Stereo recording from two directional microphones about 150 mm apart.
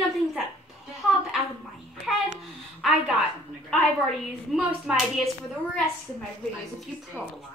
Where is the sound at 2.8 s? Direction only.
5° right (ahead or behind).